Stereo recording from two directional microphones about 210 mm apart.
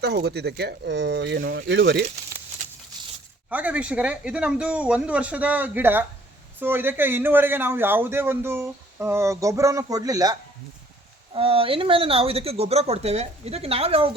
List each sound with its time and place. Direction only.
0.0 s speech: 50° right (ahead or behind)
3.5 s a man's voice: 5° right (ahead or behind)
11.3 s speech: 25° right (ahead or behind)